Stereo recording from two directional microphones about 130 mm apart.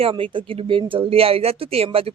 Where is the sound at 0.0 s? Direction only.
45° right (ahead or behind).